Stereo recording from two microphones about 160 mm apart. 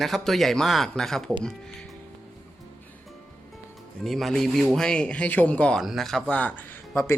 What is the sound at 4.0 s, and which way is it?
Speech, centre (ahead or behind).